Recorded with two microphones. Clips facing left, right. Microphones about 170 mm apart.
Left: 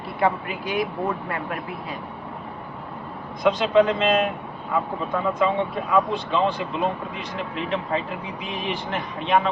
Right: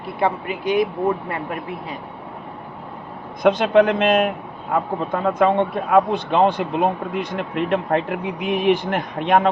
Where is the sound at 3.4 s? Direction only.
60° right (ahead or behind).